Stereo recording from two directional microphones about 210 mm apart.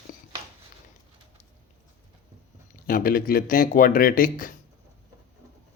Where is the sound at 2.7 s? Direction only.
40° left (ahead or behind).